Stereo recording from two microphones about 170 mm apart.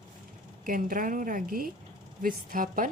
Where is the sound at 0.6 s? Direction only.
55° right (ahead or behind).